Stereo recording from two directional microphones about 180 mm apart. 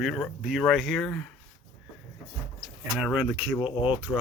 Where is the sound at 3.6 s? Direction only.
30° left (ahead or behind).